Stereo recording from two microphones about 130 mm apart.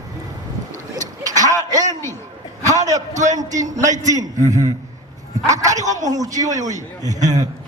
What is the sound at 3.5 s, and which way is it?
Speech, 70° right (ahead or behind).